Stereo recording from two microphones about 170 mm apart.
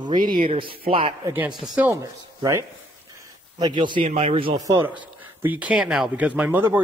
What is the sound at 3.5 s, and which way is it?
A man's voice, 25° right (ahead or behind).